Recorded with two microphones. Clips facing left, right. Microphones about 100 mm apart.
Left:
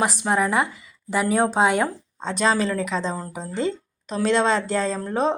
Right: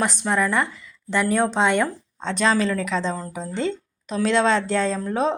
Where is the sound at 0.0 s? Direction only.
5° left (ahead or behind).